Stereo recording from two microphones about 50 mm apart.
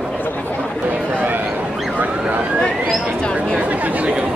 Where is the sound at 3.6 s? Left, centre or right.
Right.